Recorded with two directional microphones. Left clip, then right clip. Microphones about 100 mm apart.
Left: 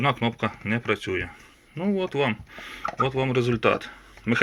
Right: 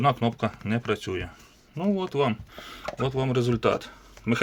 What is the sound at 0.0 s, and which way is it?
Speech, 35° right (ahead or behind).